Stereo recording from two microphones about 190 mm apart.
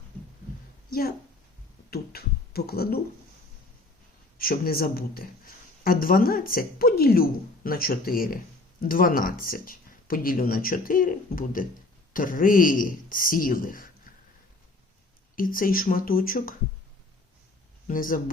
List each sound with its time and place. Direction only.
0.9 s speech: 50° left (ahead or behind)
4.4 s speech: 50° left (ahead or behind)
15.4 s speech: 45° left (ahead or behind)
17.8 s speech: 45° left (ahead or behind)